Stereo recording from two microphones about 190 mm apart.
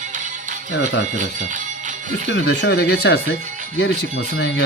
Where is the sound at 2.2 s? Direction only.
65° left (ahead or behind).